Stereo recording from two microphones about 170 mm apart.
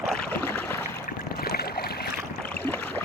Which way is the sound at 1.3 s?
65° left (ahead or behind).